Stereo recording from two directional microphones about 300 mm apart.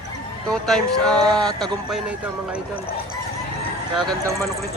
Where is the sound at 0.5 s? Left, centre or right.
Centre.